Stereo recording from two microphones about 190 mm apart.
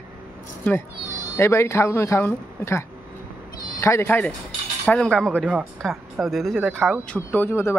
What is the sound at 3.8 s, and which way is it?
Speech, 15° left (ahead or behind).